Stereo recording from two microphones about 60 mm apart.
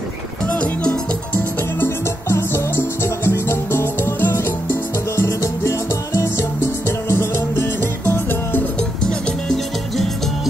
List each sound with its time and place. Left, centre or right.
0.5 s music: left
1.8 s music: left
9.0 s music: centre